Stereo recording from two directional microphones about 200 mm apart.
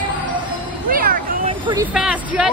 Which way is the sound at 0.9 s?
45° right (ahead or behind).